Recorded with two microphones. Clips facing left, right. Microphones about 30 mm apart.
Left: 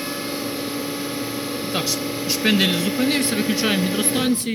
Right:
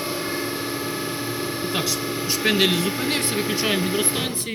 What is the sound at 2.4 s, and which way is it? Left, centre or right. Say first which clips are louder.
Speech: left 2 dB; centre.